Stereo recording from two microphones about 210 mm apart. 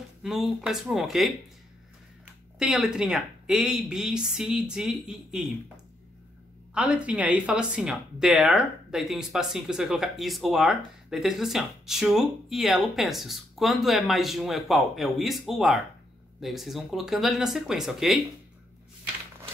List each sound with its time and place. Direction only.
0.2 s speech: centre (ahead or behind)
2.6 s speech: centre (ahead or behind)
6.7 s speech: 5° right (ahead or behind)